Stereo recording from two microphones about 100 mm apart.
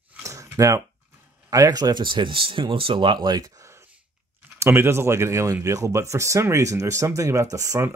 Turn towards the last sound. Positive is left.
turn(degrees=-30)  # may be behind; listen again after turning